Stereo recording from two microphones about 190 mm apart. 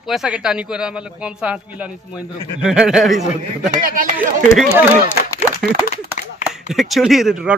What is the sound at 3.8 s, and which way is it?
Speech, 45° right (ahead or behind).